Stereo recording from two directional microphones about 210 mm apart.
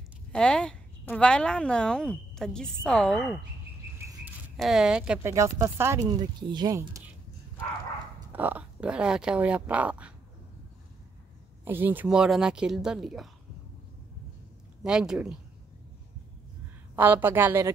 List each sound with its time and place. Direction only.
0.3 s a woman's voice: 5° left (ahead or behind)
4.6 s speech: centre (ahead or behind)
8.3 s a woman's voice: 10° right (ahead or behind)
11.6 s a woman's voice: 10° right (ahead or behind)
14.8 s a woman's voice: 5° right (ahead or behind)
16.9 s speech: 10° right (ahead or behind)